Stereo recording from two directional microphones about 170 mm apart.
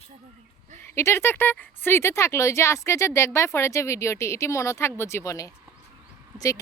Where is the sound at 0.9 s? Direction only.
15° left (ahead or behind).